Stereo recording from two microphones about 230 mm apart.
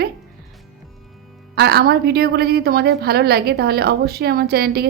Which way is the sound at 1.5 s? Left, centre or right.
Right.